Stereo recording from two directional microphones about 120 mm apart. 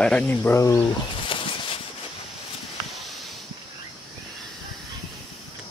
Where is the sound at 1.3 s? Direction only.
45° left (ahead or behind).